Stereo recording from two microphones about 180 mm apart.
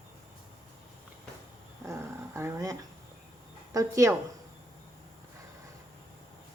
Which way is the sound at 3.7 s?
20° right (ahead or behind).